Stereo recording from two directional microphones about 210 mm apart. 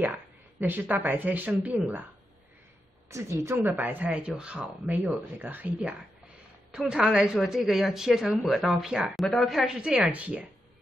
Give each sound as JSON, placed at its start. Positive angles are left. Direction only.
{"t": 0.0, "sound": "speech", "side_deg": -10}
{"t": 3.1, "sound": "a woman's voice", "side_deg": -15}